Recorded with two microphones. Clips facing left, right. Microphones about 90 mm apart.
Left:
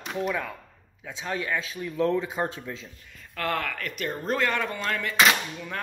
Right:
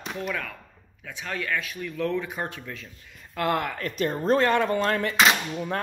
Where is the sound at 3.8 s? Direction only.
30° right (ahead or behind).